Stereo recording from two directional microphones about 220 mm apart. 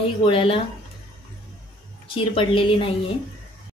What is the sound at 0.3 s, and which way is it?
Speech, 25° left (ahead or behind).